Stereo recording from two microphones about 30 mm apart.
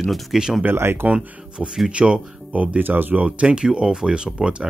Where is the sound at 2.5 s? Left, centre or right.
Right.